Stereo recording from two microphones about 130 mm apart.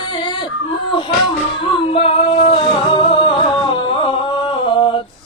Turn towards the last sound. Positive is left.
turn(degrees=40)  # may be behind; listen again after turning